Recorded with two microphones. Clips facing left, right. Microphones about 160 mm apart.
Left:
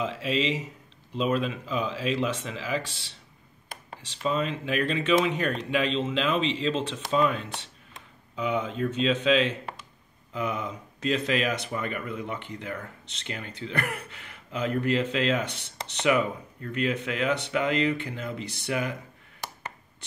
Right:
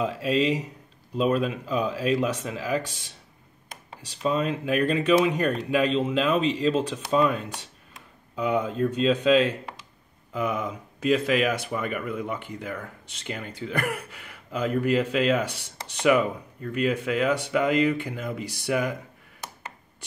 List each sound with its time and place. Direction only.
0.3 s speech: 45° right (ahead or behind)
1.1 s speech: 5° right (ahead or behind)
4.2 s speech: 5° right (ahead or behind)